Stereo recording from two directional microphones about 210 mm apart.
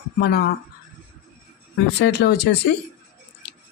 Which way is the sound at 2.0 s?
50° left (ahead or behind).